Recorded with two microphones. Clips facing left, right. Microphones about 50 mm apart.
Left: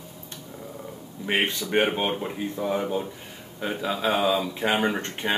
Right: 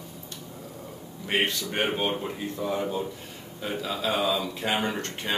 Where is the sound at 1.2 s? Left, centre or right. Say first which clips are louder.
Left 1 dB; left.